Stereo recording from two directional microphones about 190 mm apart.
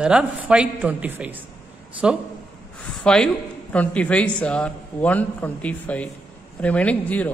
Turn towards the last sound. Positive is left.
turn(degrees=10)  # may be behind; listen again after turning